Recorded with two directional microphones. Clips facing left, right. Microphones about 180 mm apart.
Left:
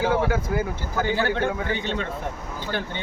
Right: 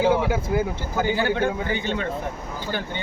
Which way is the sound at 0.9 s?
10° right (ahead or behind).